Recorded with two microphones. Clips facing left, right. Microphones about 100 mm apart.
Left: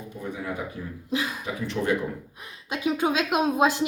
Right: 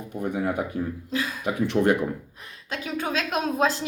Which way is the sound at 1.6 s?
60° right (ahead or behind).